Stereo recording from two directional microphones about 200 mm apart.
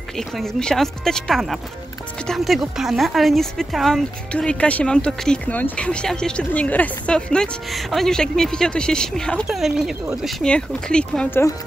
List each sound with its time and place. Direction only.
0.4 s speech: 5° left (ahead or behind)